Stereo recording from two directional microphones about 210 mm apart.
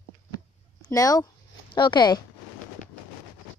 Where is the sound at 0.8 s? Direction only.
15° left (ahead or behind).